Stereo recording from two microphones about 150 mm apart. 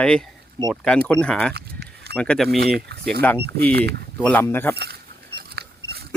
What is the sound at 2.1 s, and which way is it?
Speech, 5° left (ahead or behind).